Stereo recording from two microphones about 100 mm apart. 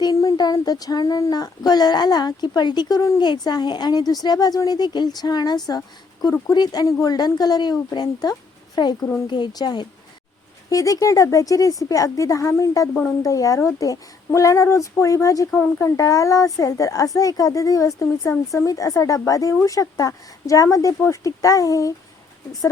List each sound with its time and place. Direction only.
0.0 s a woman's voice: 35° left (ahead or behind)